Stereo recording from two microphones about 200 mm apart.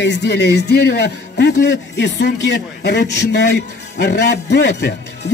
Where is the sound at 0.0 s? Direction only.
60° left (ahead or behind).